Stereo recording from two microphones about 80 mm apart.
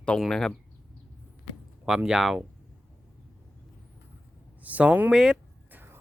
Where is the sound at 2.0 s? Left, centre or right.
Centre.